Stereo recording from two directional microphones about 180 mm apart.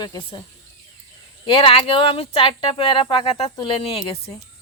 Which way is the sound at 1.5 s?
30° left (ahead or behind).